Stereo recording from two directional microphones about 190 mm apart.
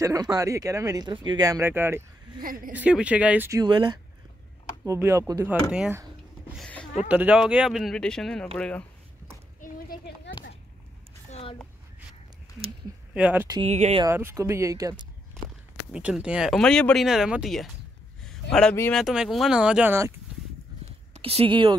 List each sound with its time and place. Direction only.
0.0 s speech: 20° right (ahead or behind)
2.4 s a woman's voice: 45° right (ahead or behind)
2.7 s speech: 5° right (ahead or behind)
6.5 s a sound: 5° left (ahead or behind)
7.1 s speech: 5° right (ahead or behind)
9.6 s children playing: 50° left (ahead or behind)
11.2 s a sound: 35° left (ahead or behind)
13.1 s speech: 5° right (ahead or behind)
13.7 s speech: 35° right (ahead or behind)
14.0 s speech: 15° right (ahead or behind)
15.9 s speech: 5° right (ahead or behind)
21.1 s speech: 30° right (ahead or behind)